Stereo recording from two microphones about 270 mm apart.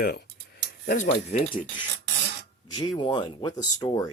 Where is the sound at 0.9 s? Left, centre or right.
Left.